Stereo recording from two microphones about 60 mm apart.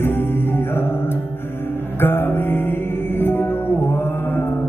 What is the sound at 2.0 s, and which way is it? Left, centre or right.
Music, left.